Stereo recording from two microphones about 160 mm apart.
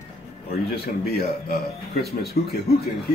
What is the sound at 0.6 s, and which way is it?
Speech, 75° left (ahead or behind).